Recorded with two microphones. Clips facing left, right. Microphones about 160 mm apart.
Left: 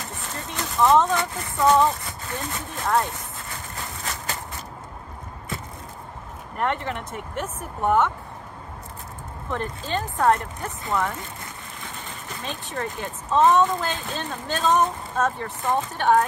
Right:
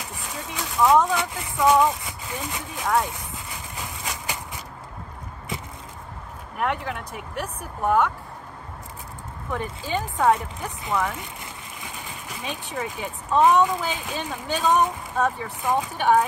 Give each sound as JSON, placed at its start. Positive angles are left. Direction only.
{"t": 0.0, "sound": "a sound", "side_deg": 0}
{"t": 1.6, "sound": "speech", "side_deg": -10}
{"t": 2.8, "sound": "speech", "side_deg": 0}
{"t": 3.7, "sound": "a sound", "side_deg": -15}
{"t": 6.5, "sound": "speech", "side_deg": -5}
{"t": 9.5, "sound": "speech", "side_deg": -10}
{"t": 11.8, "sound": "a sound", "side_deg": -15}
{"t": 12.7, "sound": "speech", "side_deg": -10}
{"t": 15.6, "sound": "speech", "side_deg": -5}